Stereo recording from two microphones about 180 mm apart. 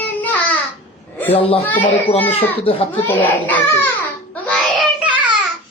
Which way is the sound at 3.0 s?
10° left (ahead or behind).